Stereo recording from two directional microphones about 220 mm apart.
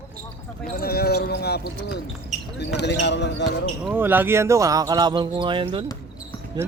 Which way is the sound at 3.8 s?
10° right (ahead or behind).